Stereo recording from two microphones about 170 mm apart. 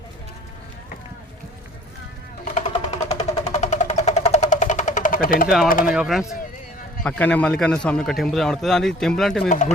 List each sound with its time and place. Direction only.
2.6 s a sound: 40° left (ahead or behind)
5.6 s speech: 55° left (ahead or behind)
5.9 s a man's voice: 5° right (ahead or behind)
7.0 s a man's voice: 10° left (ahead or behind)
9.5 s speech: 45° left (ahead or behind)